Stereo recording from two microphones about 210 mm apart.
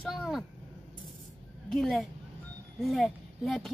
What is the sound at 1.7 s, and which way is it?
Speech, centre (ahead or behind).